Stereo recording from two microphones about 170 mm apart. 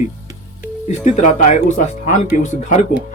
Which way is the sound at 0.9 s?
45° left (ahead or behind).